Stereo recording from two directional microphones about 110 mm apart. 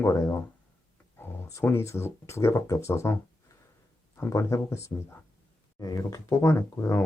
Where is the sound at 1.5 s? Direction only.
25° left (ahead or behind).